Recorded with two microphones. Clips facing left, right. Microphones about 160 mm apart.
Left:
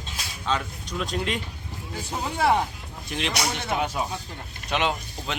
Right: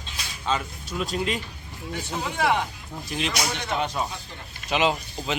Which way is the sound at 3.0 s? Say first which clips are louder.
Even; centre (ahead or behind).